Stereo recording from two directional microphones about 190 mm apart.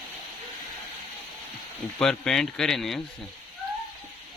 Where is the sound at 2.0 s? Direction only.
5° left (ahead or behind).